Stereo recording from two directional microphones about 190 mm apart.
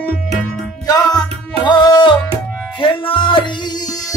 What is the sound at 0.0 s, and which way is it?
Music, 5° left (ahead or behind).